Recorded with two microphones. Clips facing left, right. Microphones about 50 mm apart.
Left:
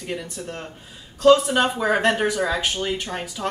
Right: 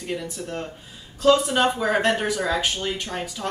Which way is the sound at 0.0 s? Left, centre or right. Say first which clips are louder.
Even; centre.